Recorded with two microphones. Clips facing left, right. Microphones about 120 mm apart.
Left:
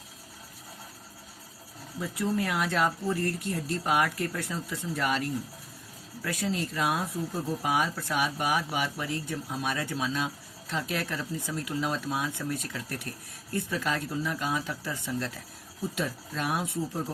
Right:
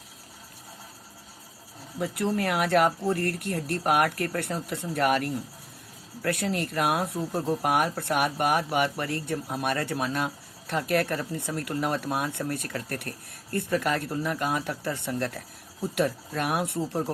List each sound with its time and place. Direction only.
2.0 s speech: 65° right (ahead or behind)